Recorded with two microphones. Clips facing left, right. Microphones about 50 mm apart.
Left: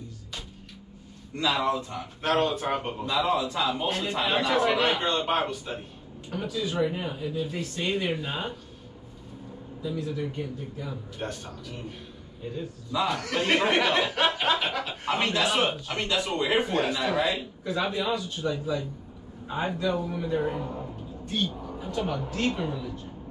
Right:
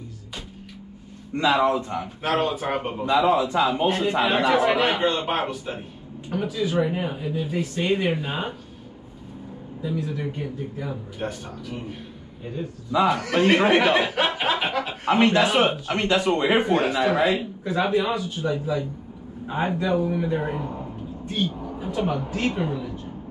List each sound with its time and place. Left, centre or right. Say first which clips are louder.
1.3 s a man's voice: right 6 dB; right
2.2 s a man's voice: right 1 dB; centre
10.1 s a man's voice: right 3 dB; centre
11.1 s a man's voice: right 4 dB; centre